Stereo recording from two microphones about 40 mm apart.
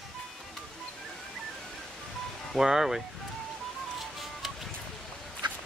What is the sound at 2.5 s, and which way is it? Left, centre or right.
Speech, centre.